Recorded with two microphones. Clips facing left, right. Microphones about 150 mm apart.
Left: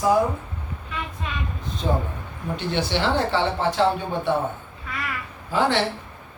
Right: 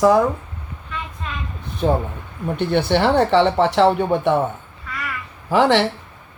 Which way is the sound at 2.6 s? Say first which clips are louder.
Right 7 dB; 60° right (ahead or behind).